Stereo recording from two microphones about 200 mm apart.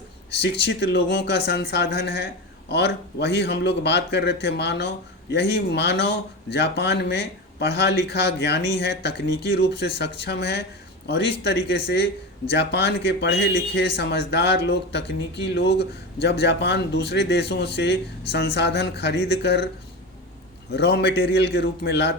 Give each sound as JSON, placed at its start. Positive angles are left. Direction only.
{"t": 0.6, "sound": "a man's voice", "side_deg": 55}
{"t": 20.7, "sound": "a man's voice", "side_deg": 55}